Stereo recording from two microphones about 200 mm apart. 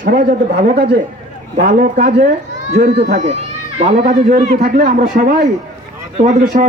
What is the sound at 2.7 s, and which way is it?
Speech, 55° right (ahead or behind).